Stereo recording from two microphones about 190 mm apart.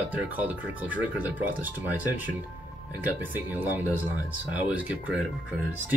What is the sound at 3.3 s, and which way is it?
Speech, 10° right (ahead or behind).